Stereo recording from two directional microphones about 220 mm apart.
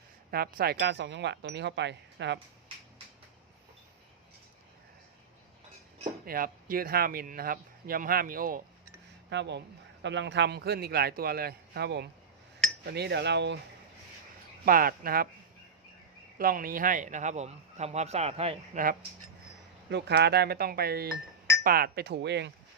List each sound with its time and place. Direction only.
0.3 s speech: 45° right (ahead or behind)
6.2 s a man's voice: 40° right (ahead or behind)
9.3 s speech: 50° right (ahead or behind)
14.6 s a man's voice: 40° right (ahead or behind)
16.4 s a man's voice: 40° right (ahead or behind)
19.9 s speech: 50° right (ahead or behind)